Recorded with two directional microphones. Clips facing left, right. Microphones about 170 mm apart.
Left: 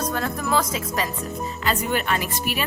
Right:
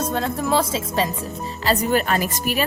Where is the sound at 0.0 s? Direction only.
25° right (ahead or behind).